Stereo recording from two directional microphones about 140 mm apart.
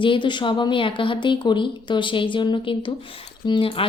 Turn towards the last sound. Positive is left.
turn(degrees=40)  # may be behind; listen again after turning